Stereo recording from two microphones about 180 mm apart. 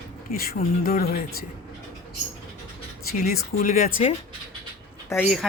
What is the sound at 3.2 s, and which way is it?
Speech, 45° left (ahead or behind).